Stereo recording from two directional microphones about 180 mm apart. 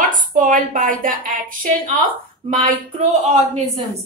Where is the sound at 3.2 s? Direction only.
35° right (ahead or behind).